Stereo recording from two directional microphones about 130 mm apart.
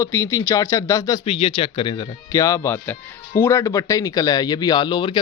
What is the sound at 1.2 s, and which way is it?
Speech, 45° left (ahead or behind).